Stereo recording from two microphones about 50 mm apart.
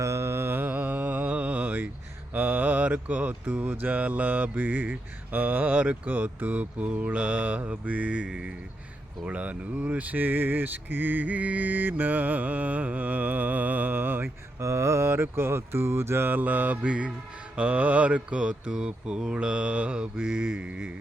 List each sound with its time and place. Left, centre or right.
0.0 s mantra: right
0.7 s mantra: right
14.6 s a sound: right
17.5 s mantra: right